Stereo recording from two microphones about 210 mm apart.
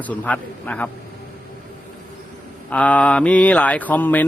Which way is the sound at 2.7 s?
5° left (ahead or behind).